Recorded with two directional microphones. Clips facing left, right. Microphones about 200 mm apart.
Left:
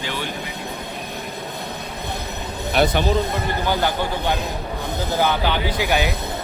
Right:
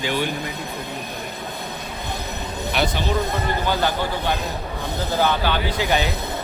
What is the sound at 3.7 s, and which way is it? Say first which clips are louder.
Speech: left 1 dB; 15° left (ahead or behind).